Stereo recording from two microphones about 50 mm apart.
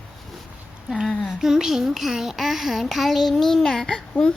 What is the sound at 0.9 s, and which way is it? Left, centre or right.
Speech, centre.